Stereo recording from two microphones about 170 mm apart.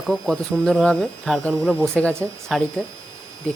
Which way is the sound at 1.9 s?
5° left (ahead or behind).